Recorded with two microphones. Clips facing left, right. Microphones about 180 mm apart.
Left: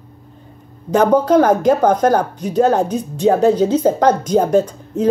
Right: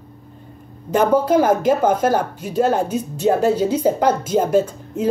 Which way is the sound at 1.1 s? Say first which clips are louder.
Left 3 dB; 10° right (ahead or behind).